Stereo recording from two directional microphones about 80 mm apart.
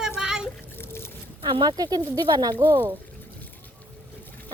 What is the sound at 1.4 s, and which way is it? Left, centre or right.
Speech, right.